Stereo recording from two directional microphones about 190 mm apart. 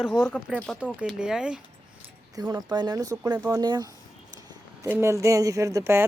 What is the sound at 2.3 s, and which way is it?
Speech, 20° right (ahead or behind).